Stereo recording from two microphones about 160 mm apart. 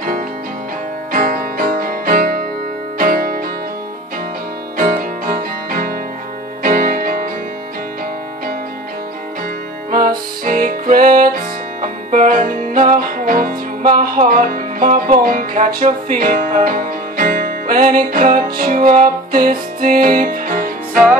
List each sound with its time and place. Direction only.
1.1 s music: 60° right (ahead or behind)
4.7 s music: 60° right (ahead or behind)
10.0 s music: 65° right (ahead or behind)